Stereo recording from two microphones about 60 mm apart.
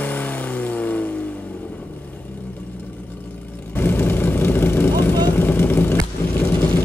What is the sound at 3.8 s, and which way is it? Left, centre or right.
Vehicle, left.